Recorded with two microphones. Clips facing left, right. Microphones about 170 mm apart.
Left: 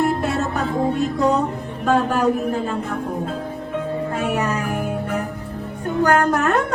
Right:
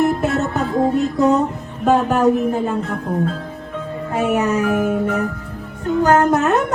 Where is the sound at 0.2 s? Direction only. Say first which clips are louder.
Right 3 dB; 20° right (ahead or behind).